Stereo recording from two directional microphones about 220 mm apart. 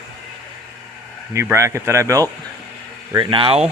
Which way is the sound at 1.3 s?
10° right (ahead or behind).